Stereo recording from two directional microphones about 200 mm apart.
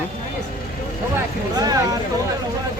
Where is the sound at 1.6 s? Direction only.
20° right (ahead or behind).